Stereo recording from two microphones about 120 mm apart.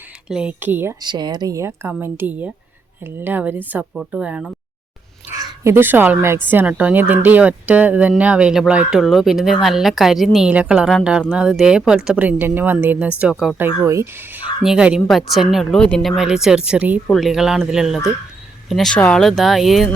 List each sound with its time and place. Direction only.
0.3 s speech: 10° right (ahead or behind)
1.0 s speech: 35° right (ahead or behind); by 4.5 s 10° right (ahead or behind)
5.4 s speech: 20° right (ahead or behind); by 13.6 s centre (ahead or behind)
13.6 s speech: 20° right (ahead or behind)
14.6 s speech: 5° right (ahead or behind)
17.1 s speech: centre (ahead or behind)